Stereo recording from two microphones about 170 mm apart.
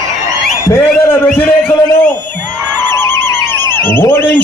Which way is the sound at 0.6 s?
15° left (ahead or behind).